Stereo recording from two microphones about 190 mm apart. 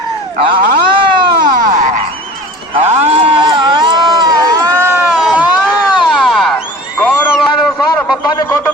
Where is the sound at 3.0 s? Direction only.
30° right (ahead or behind); by 6.6 s 5° left (ahead or behind).